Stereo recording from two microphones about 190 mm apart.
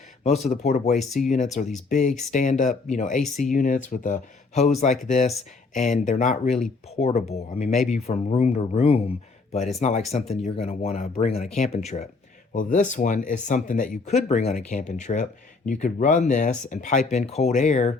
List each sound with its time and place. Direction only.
0.2 s speech: 35° left (ahead or behind)
0.9 s speech: centre (ahead or behind)
1.6 s speech: 40° left (ahead or behind)